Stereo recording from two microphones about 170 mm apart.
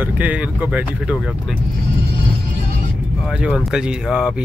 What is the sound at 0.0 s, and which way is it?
Speech, 10° right (ahead or behind).